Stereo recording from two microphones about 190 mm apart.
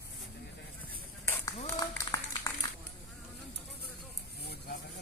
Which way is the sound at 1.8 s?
20° left (ahead or behind).